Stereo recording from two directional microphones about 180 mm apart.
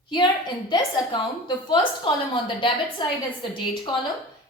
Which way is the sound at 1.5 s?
25° left (ahead or behind).